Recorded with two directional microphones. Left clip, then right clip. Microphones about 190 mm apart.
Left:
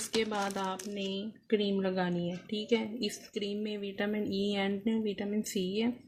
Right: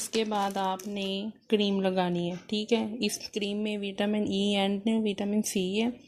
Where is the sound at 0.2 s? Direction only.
30° right (ahead or behind).